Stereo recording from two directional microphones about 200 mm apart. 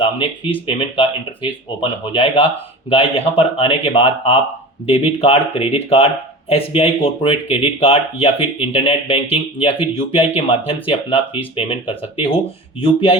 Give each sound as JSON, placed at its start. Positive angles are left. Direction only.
{"t": 0.7, "sound": "speech", "side_deg": 25}